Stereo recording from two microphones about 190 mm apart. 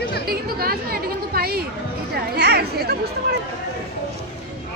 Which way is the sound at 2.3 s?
60° right (ahead or behind).